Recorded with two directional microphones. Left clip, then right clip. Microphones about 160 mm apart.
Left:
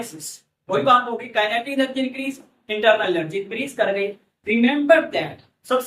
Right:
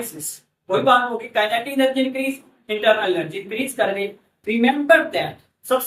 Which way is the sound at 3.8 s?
20° left (ahead or behind).